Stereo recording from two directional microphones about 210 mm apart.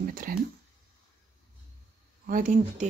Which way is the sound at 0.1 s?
40° right (ahead or behind).